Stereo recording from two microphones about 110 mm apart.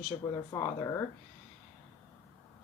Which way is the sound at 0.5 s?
30° left (ahead or behind).